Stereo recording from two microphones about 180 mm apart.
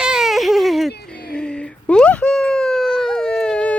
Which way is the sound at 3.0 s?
5° left (ahead or behind).